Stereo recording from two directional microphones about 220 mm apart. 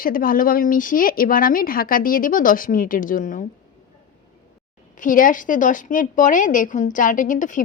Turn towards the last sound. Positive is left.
turn(degrees=35)  # may be behind; listen again after turning